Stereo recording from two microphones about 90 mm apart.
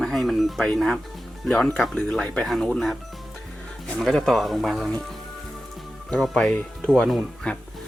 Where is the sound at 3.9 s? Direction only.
Centre (ahead or behind).